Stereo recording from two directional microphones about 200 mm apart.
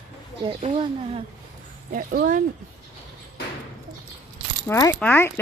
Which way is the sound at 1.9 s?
45° right (ahead or behind).